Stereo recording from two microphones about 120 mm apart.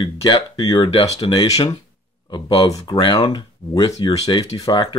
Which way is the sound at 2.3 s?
35° left (ahead or behind).